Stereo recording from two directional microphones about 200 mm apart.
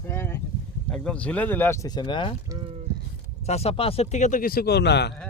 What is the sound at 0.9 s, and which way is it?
Speech, 5° left (ahead or behind).